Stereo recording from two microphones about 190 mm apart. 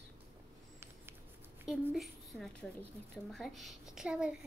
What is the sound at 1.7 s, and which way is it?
A woman's voice, centre (ahead or behind).